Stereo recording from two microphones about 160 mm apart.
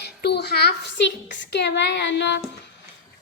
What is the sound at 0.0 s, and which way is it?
A woman's voice, 90° left.